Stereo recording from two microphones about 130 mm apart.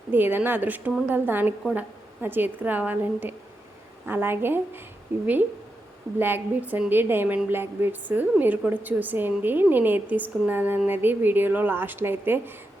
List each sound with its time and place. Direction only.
0.1 s a woman's voice: 15° right (ahead or behind)